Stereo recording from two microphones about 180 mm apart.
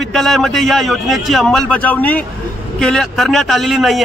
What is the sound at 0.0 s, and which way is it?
A man's voice, centre (ahead or behind).